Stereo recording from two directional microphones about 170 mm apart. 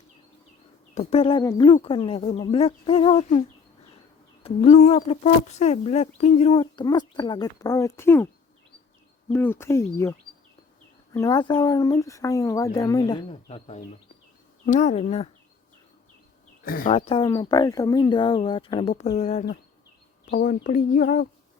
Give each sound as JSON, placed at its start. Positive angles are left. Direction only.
{"t": 0.9, "sound": "a woman's voice", "side_deg": 35}
{"t": 4.4, "sound": "a woman's voice", "side_deg": 40}
{"t": 9.3, "sound": "a woman's voice", "side_deg": 15}
{"t": 16.6, "sound": "speech", "side_deg": 55}
{"t": 16.9, "sound": "speech", "side_deg": 35}
{"t": 20.3, "sound": "speech", "side_deg": 55}